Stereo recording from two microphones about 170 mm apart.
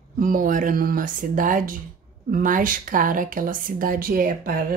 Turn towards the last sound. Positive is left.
turn(degrees=-55)  # may be behind; listen again after turning